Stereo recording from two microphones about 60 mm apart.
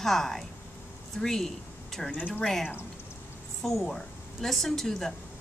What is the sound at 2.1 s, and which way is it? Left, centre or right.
Speech, left.